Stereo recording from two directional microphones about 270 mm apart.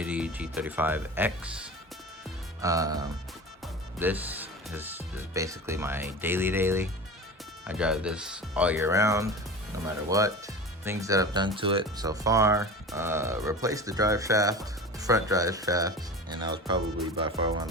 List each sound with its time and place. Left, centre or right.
0.0 s speech: centre